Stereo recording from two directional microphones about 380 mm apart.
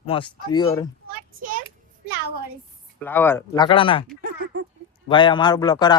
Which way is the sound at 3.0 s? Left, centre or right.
Centre.